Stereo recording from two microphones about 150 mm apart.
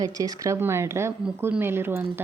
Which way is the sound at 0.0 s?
25° right (ahead or behind).